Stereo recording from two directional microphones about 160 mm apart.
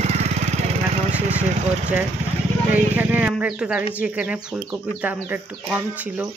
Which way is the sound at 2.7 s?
10° right (ahead or behind).